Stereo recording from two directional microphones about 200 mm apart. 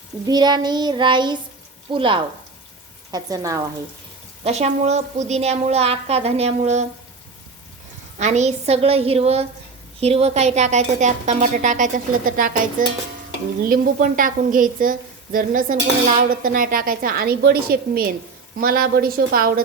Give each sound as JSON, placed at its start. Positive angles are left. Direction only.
{"t": 0.3, "sound": "child singing", "side_deg": -20}
{"t": 3.1, "sound": "speech", "side_deg": -20}
{"t": 4.4, "sound": "a woman's voice", "side_deg": -30}
{"t": 8.2, "sound": "a woman's voice", "side_deg": -35}
{"t": 13.7, "sound": "a woman's voice", "side_deg": -45}